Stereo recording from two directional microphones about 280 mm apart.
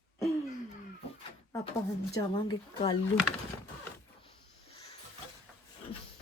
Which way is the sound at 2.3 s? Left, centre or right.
Centre.